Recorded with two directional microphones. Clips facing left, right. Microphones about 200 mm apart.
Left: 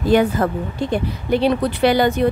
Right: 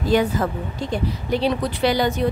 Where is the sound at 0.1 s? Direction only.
55° left (ahead or behind).